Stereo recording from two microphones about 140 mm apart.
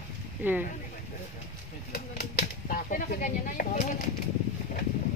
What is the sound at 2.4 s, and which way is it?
Speech, 85° left.